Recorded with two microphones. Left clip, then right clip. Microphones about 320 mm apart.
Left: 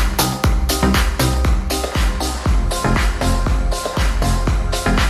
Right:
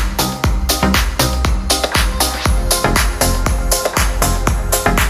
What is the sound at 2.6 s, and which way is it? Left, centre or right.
Music, right.